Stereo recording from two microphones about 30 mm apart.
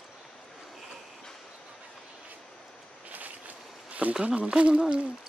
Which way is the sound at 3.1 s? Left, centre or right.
Right.